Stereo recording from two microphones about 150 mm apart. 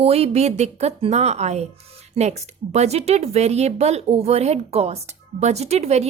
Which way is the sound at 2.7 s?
45° right (ahead or behind).